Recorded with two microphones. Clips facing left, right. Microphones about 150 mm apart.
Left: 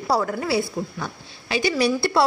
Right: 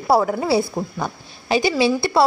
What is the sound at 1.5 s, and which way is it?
Speech, 30° right (ahead or behind).